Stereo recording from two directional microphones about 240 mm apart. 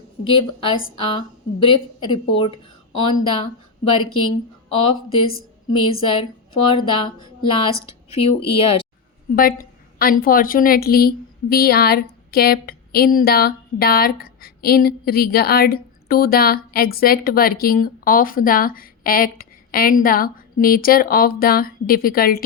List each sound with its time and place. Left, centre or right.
0.3 s a woman's voice: left
9.3 s a woman's voice: left